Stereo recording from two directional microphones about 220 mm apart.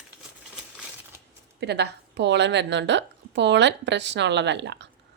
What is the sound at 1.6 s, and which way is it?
Speech, 50° right (ahead or behind).